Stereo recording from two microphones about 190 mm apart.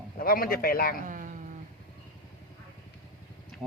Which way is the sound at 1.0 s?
45° right (ahead or behind).